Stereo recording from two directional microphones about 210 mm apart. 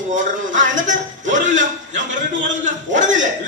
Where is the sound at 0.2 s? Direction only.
35° right (ahead or behind).